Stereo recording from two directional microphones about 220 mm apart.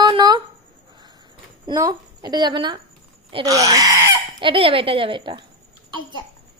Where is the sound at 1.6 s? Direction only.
15° right (ahead or behind).